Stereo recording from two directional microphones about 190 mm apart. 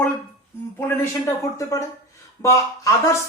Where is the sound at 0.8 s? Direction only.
10° left (ahead or behind).